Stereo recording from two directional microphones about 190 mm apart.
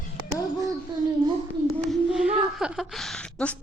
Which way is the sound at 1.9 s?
5° right (ahead or behind).